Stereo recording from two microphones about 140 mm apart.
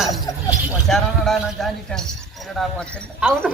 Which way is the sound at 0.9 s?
Centre (ahead or behind).